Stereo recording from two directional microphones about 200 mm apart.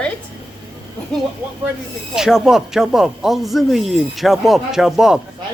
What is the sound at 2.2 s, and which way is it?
Speech, 5° right (ahead or behind).